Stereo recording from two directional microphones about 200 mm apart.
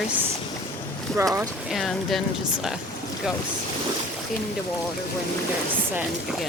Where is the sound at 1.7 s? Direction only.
Centre (ahead or behind).